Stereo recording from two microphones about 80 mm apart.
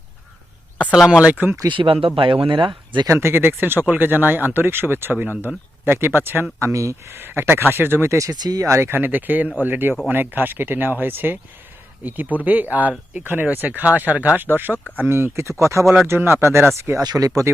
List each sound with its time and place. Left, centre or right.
0.9 s speech: centre
1.3 s speech: right
1.6 s speech: right
3.1 s speech: right
8.3 s speech: right
8.8 s speech: right
17.0 s speech: right